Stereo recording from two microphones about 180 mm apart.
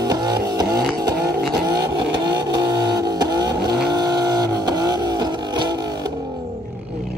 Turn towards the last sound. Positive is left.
turn(degrees=-25)  # may be behind; listen again after turning